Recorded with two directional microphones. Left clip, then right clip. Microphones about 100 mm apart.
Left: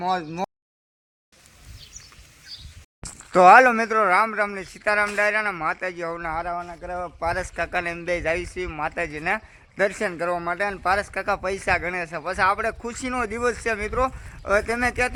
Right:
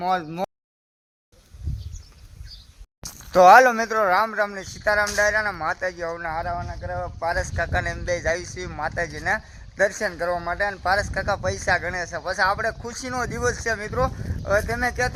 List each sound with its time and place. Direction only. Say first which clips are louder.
0.0 s a sound: right 1 dB; 35° right (ahead or behind)
3.0 s speech: right 1 dB; centre (ahead or behind)
6.1 s speech: even; 20° left (ahead or behind)
7.5 s speech: even; 5° left (ahead or behind)
10.8 s speech: even; centre (ahead or behind)